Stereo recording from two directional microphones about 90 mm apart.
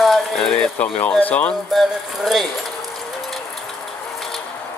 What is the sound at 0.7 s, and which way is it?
Speech, 15° left (ahead or behind).